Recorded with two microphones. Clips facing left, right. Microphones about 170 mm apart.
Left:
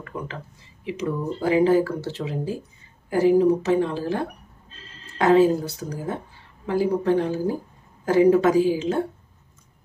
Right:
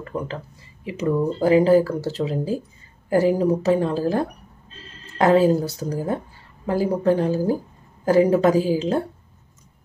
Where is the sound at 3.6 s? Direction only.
40° right (ahead or behind).